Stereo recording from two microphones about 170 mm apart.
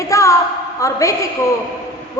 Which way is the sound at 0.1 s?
20° left (ahead or behind).